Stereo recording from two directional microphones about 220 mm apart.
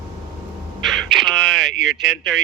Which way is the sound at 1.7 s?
55° right (ahead or behind).